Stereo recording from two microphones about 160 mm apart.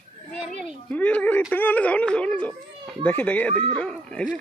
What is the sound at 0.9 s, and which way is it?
Speech, 10° left (ahead or behind).